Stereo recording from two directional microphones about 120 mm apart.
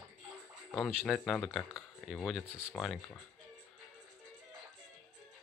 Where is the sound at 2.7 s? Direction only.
5° left (ahead or behind).